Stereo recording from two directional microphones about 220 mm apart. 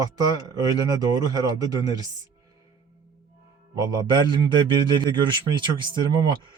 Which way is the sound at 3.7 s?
15° right (ahead or behind).